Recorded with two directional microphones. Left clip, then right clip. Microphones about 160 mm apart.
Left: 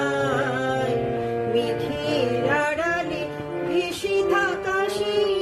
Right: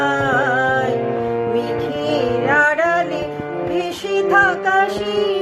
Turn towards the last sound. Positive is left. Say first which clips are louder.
# right 4 dB
turn(degrees=20)  # may be behind; listen again after turning